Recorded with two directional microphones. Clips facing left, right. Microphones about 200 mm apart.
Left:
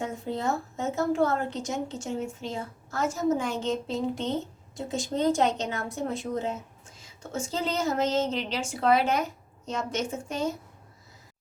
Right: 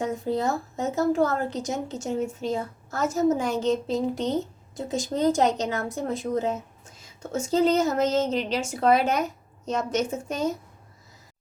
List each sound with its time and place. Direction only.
0.0 s a woman's voice: 40° right (ahead or behind)